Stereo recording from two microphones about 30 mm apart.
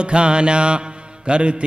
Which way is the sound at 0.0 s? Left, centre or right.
Right.